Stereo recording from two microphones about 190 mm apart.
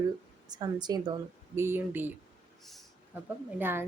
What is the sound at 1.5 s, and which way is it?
Speech, 10° right (ahead or behind).